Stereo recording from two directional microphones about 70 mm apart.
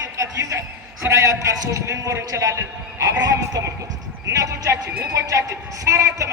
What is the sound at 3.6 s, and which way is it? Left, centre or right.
Speech, right.